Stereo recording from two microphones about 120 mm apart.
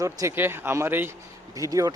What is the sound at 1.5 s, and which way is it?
Speech, 30° right (ahead or behind).